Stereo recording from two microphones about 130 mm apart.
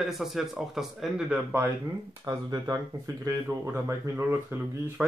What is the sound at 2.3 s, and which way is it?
Speech, 30° right (ahead or behind).